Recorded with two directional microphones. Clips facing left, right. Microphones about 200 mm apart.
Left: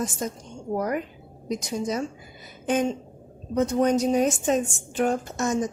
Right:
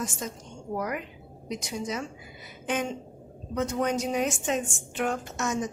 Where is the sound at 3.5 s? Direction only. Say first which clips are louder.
Left 6 dB; 35° left (ahead or behind).